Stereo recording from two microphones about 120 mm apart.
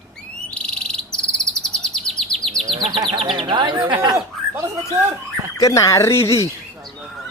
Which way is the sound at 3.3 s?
45° right (ahead or behind).